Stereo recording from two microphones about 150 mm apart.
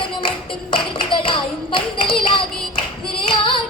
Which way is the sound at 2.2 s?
35° left (ahead or behind).